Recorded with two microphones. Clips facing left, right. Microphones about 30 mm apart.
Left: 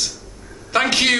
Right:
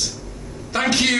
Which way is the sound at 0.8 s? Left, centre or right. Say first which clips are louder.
Right 1 dB; left.